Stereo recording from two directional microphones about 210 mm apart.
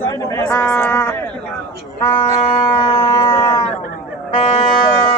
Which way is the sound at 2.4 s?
25° left (ahead or behind).